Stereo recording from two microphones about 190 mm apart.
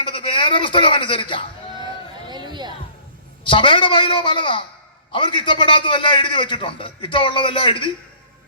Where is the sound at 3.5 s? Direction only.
25° left (ahead or behind).